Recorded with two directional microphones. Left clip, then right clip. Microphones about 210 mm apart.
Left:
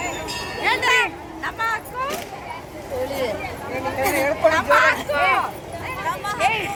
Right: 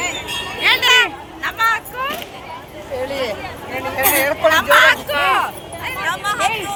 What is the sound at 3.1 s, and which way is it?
Speech, 20° right (ahead or behind).